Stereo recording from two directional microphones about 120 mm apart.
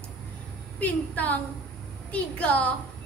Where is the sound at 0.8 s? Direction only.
10° left (ahead or behind).